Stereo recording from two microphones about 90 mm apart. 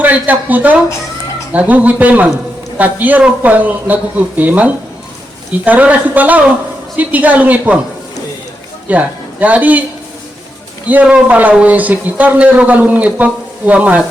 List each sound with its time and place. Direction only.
0.0 s a man's voice: 20° right (ahead or behind)
8.9 s speech: 15° right (ahead or behind)
11.0 s a man's voice: 15° right (ahead or behind)